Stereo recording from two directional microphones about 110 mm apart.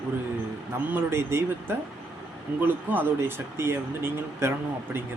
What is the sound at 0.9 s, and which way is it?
Speech, 20° right (ahead or behind).